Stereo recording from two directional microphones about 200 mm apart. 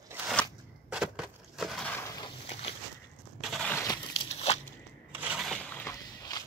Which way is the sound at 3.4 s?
Centre (ahead or behind).